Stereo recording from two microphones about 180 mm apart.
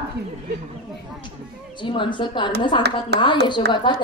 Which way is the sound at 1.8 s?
25° left (ahead or behind).